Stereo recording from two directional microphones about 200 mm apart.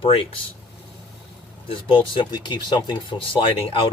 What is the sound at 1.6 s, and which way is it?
Speech, 25° left (ahead or behind).